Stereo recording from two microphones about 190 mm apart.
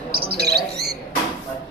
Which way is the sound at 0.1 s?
55° right (ahead or behind).